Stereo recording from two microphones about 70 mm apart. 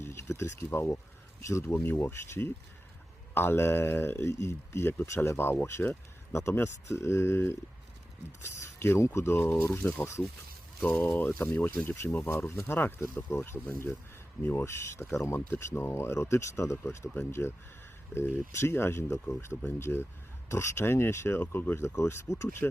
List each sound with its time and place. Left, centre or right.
0.0 s speech: left
1.7 s speech: left
10.8 s speech: left